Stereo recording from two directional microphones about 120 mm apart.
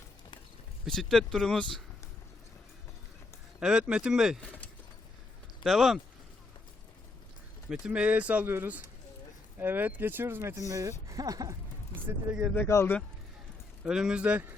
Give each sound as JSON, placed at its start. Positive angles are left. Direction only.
{"t": 0.9, "sound": "speech", "side_deg": 5}
{"t": 3.6, "sound": "speech", "side_deg": -5}
{"t": 4.4, "sound": "a sound", "side_deg": 10}
{"t": 5.6, "sound": "speech", "side_deg": 0}
{"t": 7.7, "sound": "speech", "side_deg": -10}
{"t": 12.5, "sound": "speech", "side_deg": 20}
{"t": 13.8, "sound": "speech", "side_deg": -5}